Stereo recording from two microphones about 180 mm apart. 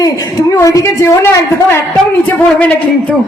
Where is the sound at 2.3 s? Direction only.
10° left (ahead or behind).